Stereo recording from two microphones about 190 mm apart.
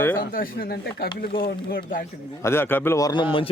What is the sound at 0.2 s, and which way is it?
Speech, 50° left (ahead or behind).